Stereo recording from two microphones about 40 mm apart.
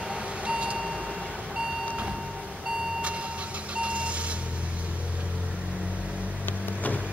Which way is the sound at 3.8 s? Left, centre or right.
Right.